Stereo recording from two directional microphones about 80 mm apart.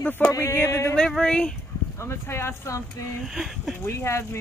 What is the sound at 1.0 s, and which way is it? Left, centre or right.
Speech, centre.